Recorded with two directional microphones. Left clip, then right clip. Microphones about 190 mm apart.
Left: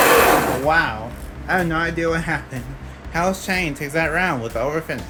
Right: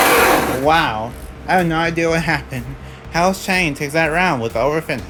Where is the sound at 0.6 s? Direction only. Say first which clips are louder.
Right 6 dB; 55° right (ahead or behind).